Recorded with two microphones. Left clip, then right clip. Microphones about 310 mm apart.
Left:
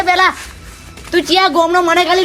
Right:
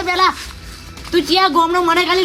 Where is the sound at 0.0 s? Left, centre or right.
Centre.